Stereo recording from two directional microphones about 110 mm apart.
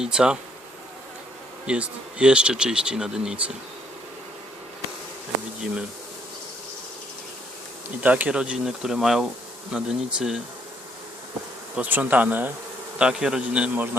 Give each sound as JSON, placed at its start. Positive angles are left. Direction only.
{"t": 0.0, "sound": "speech", "side_deg": -5}
{"t": 1.6, "sound": "speech", "side_deg": -10}
{"t": 8.0, "sound": "speech", "side_deg": -15}
{"t": 11.8, "sound": "speech", "side_deg": -15}